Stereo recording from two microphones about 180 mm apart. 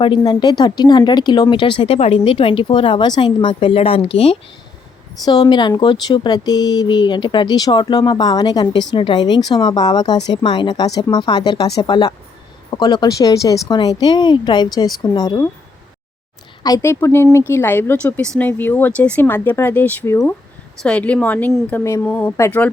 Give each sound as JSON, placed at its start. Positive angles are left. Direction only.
{"t": 0.0, "sound": "speech", "side_deg": 25}
{"t": 5.2, "sound": "speech", "side_deg": 25}
{"t": 16.6, "sound": "speech", "side_deg": 20}